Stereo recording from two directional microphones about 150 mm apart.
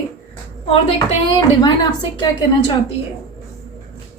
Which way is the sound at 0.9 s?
25° left (ahead or behind).